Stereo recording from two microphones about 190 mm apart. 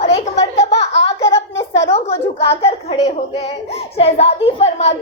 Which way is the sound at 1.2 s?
15° left (ahead or behind).